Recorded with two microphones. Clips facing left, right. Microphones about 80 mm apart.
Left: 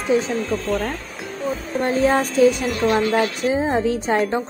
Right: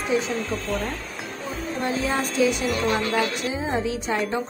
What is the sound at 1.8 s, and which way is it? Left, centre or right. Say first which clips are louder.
A woman's voice: left 7 dB; left.